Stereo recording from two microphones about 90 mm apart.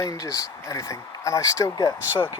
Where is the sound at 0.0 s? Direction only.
40° left (ahead or behind).